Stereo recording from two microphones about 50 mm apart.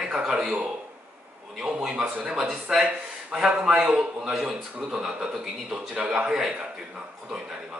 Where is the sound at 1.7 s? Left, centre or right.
Centre.